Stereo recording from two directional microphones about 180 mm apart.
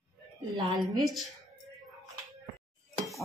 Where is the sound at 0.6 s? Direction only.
25° right (ahead or behind).